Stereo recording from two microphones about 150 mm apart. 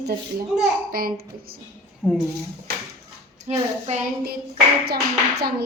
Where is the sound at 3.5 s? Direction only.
45° right (ahead or behind).